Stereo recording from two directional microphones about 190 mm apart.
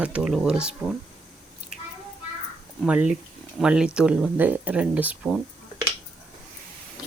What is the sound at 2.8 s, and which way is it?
Speech, 5° right (ahead or behind).